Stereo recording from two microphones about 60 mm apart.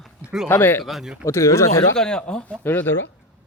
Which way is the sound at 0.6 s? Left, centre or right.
Left.